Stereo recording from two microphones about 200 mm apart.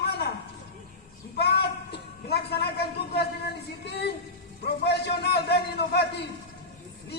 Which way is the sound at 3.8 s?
55° left (ahead or behind).